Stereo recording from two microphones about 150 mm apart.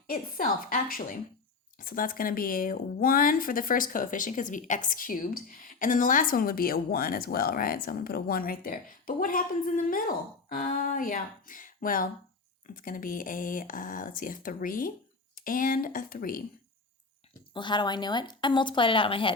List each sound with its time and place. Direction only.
0.1 s speech: 70° left (ahead or behind)
17.5 s a woman's voice: 30° left (ahead or behind)